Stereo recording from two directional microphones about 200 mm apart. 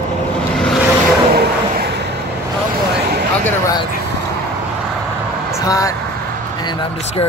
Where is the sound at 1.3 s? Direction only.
50° right (ahead or behind).